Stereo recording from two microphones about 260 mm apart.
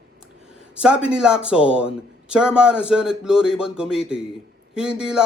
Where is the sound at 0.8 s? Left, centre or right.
Centre.